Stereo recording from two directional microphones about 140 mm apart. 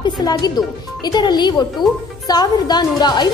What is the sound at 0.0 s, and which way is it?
A woman's voice, 30° left (ahead or behind).